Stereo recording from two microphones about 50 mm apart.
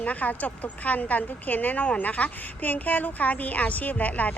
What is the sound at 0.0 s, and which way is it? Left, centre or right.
Speech, left.